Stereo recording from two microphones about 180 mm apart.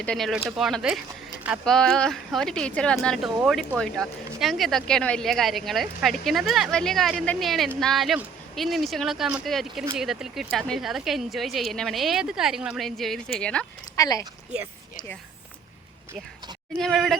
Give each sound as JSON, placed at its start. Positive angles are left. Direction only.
{"t": 0.0, "sound": "speech", "side_deg": 5}
{"t": 13.9, "sound": "speech", "side_deg": 20}
{"t": 16.7, "sound": "speech", "side_deg": 0}